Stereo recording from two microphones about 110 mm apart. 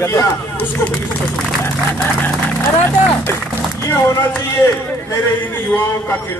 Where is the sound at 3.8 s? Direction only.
20° left (ahead or behind).